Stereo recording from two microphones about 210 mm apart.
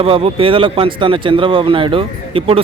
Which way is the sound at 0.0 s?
25° right (ahead or behind).